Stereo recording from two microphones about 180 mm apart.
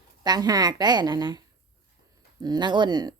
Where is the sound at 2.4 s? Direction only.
25° right (ahead or behind).